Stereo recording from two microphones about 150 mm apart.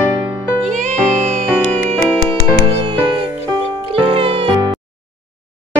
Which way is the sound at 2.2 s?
35° right (ahead or behind).